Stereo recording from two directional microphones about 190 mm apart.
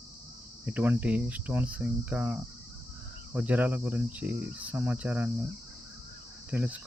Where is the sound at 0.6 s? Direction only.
10° right (ahead or behind).